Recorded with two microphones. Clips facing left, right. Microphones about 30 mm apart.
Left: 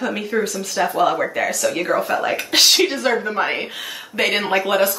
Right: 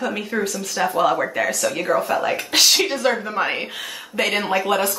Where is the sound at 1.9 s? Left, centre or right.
Left.